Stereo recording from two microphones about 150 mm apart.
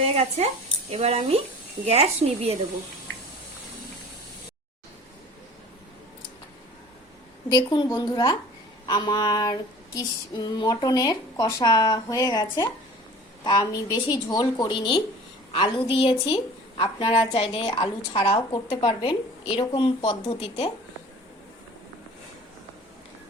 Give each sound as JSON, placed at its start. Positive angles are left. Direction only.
{"t": 0.0, "sound": "a woman's voice", "side_deg": -45}
{"t": 7.5, "sound": "female singing", "side_deg": 25}
{"t": 13.4, "sound": "a woman's voice", "side_deg": 25}
{"t": 13.9, "sound": "female singing", "side_deg": 30}
{"t": 15.5, "sound": "a woman's voice", "side_deg": 35}